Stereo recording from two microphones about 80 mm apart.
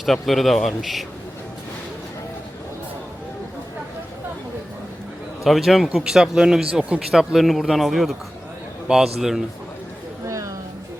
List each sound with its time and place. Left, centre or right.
0.0 s speech: centre
5.4 s speech: centre
10.2 s a sound: right